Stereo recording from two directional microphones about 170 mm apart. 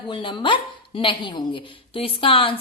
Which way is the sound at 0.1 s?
30° left (ahead or behind).